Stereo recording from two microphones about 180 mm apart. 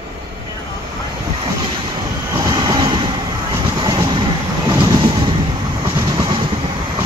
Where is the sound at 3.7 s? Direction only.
25° right (ahead or behind).